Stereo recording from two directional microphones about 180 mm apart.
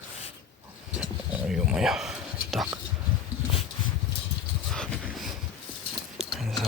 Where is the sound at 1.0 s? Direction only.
5° right (ahead or behind).